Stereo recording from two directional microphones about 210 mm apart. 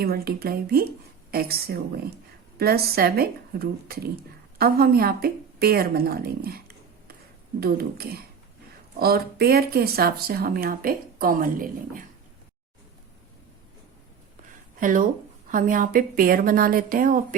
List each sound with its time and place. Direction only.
0.0 s speech: 45° right (ahead or behind)
14.8 s a woman's voice: 40° right (ahead or behind)